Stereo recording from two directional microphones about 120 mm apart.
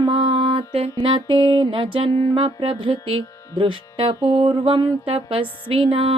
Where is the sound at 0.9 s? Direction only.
45° right (ahead or behind).